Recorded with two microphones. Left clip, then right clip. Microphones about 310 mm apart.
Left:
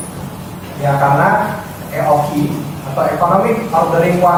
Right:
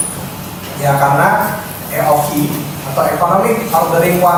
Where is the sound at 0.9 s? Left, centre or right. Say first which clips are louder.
Right 1 dB; centre.